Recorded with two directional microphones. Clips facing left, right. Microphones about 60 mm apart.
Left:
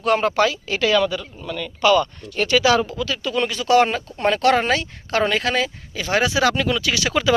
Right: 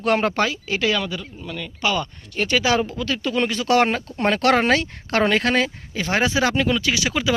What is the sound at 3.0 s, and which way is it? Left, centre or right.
Speech, right.